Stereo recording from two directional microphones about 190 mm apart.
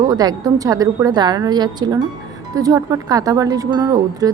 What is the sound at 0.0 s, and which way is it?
A woman's voice, 20° right (ahead or behind).